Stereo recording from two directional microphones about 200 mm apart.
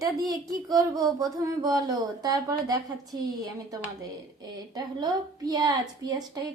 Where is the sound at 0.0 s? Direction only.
20° right (ahead or behind).